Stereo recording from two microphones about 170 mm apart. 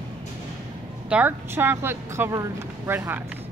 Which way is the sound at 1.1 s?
10° right (ahead or behind).